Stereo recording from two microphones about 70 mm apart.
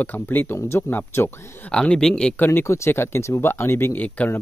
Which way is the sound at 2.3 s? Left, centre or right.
Left.